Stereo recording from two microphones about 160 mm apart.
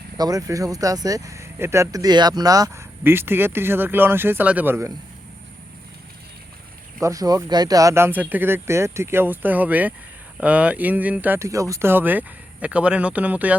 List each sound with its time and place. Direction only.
0.2 s speech: 20° right (ahead or behind)
7.0 s speech: 20° right (ahead or behind)